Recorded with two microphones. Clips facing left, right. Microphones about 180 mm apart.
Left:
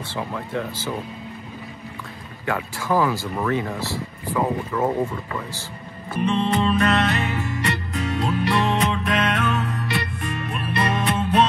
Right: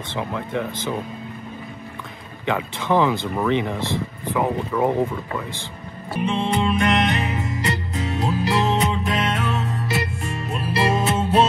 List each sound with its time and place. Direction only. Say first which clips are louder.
0.1 s speech: right 2 dB; 20° right (ahead or behind)
2.4 s speech: right 2 dB; 20° right (ahead or behind)
6.1 s music: left 1 dB; 10° right (ahead or behind); by 11.4 s 25° right (ahead or behind)